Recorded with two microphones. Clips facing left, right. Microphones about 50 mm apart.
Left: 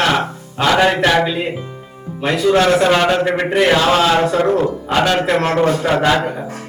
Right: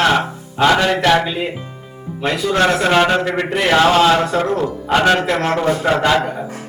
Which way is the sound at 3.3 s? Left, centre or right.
Centre.